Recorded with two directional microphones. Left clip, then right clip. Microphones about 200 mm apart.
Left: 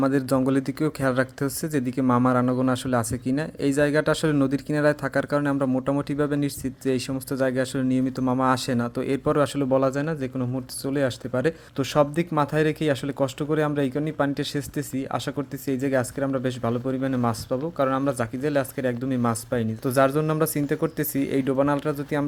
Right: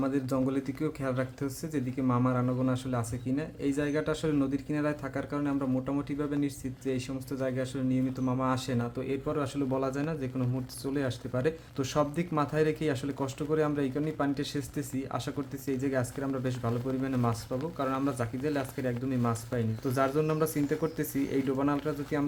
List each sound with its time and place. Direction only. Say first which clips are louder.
0.0 s speech: left 8 dB; 45° left (ahead or behind)